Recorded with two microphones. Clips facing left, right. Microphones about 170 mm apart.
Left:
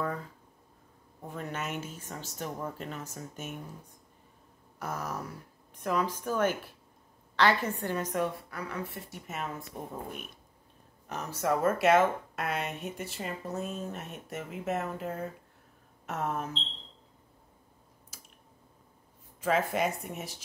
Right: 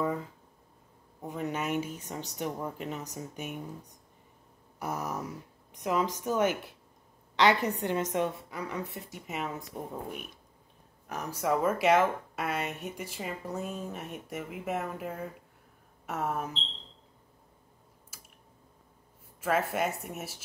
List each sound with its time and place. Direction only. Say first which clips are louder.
1.2 s speech: right 4 dB; 15° right (ahead or behind)
4.7 s a woman's voice: right 2 dB; 15° right (ahead or behind)
11.1 s speech: even; 10° right (ahead or behind)
19.4 s speech: left 1 dB; 5° right (ahead or behind)